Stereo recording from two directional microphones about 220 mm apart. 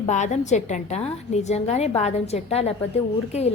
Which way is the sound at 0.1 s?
30° left (ahead or behind).